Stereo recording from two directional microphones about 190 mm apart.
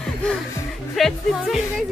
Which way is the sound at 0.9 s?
Centre (ahead or behind).